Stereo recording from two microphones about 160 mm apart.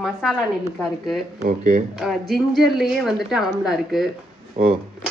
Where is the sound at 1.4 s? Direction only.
55° right (ahead or behind).